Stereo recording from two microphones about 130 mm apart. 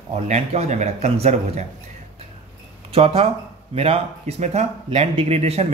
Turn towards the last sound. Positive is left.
turn(degrees=-55)  # may be behind; listen again after turning